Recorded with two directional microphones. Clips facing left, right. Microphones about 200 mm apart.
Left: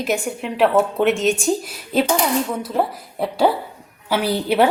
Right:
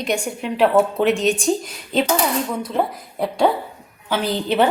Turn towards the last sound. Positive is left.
turn(degrees=10)  # may be behind; listen again after turning